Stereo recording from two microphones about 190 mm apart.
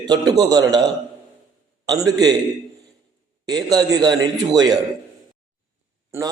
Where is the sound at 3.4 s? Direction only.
20° right (ahead or behind).